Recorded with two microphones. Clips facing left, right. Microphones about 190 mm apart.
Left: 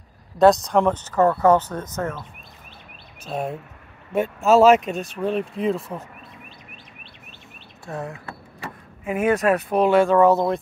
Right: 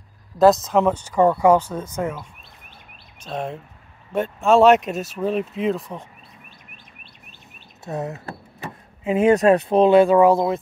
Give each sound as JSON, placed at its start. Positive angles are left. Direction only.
{"t": 0.4, "sound": "speech", "side_deg": 0}
{"t": 3.3, "sound": "speech", "side_deg": 10}
{"t": 7.8, "sound": "speech", "side_deg": -20}
{"t": 8.5, "sound": "a sound", "side_deg": -25}
{"t": 9.3, "sound": "speech", "side_deg": -30}